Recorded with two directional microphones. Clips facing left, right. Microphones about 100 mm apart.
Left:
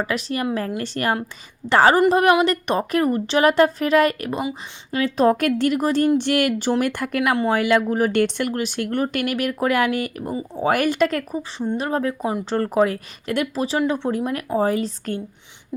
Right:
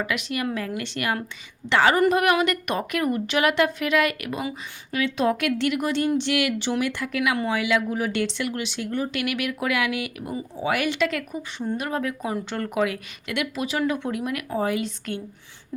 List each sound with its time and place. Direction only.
0.0 s a woman's voice: 35° left (ahead or behind); by 7.2 s 50° left (ahead or behind)
7.2 s speech: 35° left (ahead or behind); by 9.2 s 60° left (ahead or behind)
9.2 s a woman's voice: 40° left (ahead or behind)